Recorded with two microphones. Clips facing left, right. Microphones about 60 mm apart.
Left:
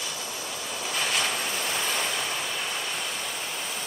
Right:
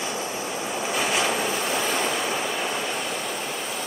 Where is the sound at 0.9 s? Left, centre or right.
Centre.